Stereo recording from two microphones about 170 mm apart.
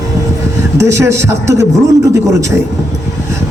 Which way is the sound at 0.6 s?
15° right (ahead or behind).